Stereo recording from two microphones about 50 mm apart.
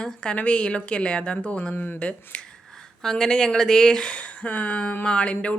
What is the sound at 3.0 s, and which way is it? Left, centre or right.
Speech, centre.